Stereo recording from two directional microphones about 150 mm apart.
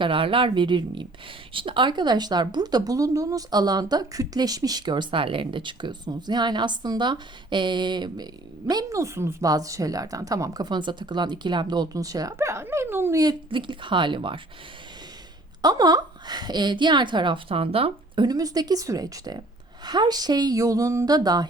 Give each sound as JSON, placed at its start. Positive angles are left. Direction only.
{"t": 0.0, "sound": "a woman's voice", "side_deg": -35}
{"t": 15.6, "sound": "a woman's voice", "side_deg": -25}
{"t": 18.3, "sound": "speech", "side_deg": -25}